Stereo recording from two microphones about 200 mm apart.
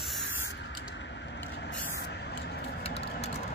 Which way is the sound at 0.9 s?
60° left (ahead or behind).